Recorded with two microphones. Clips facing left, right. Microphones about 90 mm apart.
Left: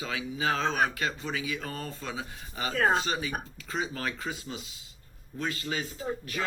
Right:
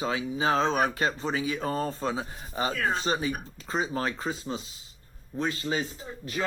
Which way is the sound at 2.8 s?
35° left (ahead or behind).